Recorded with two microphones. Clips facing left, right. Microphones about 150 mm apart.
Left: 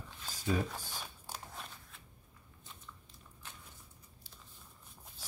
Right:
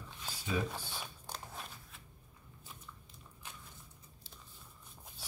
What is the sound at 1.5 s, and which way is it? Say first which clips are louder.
Scissors: right 1 dB; 5° right (ahead or behind).